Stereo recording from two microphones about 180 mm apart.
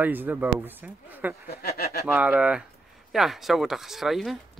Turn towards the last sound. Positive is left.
turn(degrees=0)  # may be behind; listen again after turning